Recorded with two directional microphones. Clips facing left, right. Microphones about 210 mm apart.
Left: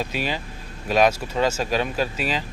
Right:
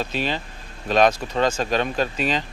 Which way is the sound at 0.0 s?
10° left (ahead or behind).